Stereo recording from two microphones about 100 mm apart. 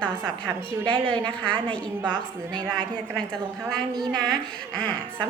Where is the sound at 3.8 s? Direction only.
45° right (ahead or behind).